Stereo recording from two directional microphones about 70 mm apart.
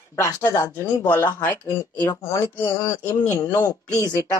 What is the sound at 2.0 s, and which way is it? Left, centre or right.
Speech, left.